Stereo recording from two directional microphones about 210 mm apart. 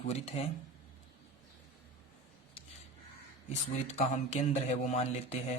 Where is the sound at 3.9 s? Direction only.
35° left (ahead or behind).